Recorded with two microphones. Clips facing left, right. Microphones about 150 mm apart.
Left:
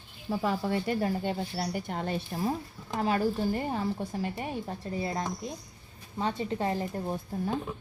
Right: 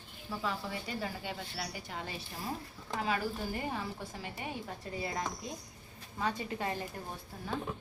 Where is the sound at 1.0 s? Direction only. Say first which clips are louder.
Left 9 dB; 45° left (ahead or behind); by 7.1 s 30° left (ahead or behind).